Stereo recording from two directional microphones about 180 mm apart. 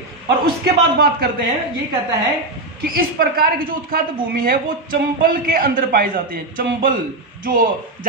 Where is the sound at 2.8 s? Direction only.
55° right (ahead or behind).